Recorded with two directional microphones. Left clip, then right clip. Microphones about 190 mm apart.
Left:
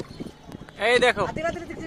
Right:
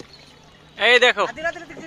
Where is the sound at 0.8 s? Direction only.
5° right (ahead or behind).